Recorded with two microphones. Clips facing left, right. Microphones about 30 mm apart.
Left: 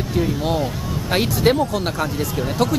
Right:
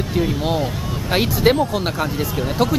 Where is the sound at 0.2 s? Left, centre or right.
Centre.